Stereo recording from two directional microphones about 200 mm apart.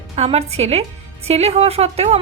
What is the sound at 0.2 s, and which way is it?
A woman's voice, 30° right (ahead or behind).